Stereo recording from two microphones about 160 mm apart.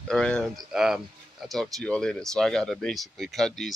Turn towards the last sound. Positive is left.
turn(degrees=0)  # may be behind; listen again after turning